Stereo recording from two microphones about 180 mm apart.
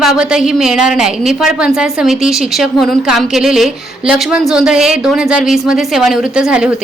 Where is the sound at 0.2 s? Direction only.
5° right (ahead or behind).